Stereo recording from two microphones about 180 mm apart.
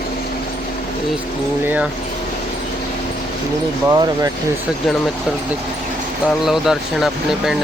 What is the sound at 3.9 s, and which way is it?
Speech, 20° right (ahead or behind).